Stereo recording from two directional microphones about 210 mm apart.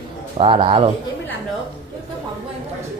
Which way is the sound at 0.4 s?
25° right (ahead or behind).